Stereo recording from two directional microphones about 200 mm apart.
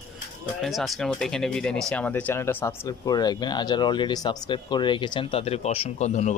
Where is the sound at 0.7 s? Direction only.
Centre (ahead or behind).